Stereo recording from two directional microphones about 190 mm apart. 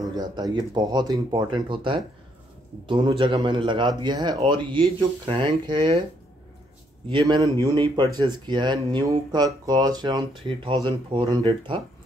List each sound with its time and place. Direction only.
0.1 s a man's voice: 20° right (ahead or behind)
7.1 s a man's voice: 25° right (ahead or behind)